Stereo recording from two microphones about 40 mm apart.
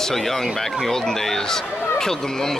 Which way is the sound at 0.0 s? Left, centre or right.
Centre.